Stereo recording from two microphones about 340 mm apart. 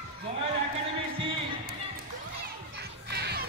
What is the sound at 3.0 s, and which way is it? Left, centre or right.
Music, right.